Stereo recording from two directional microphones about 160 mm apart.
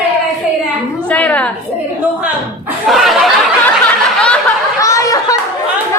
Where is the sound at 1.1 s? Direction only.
10° left (ahead or behind).